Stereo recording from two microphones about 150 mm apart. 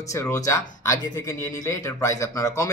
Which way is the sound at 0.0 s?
20° left (ahead or behind).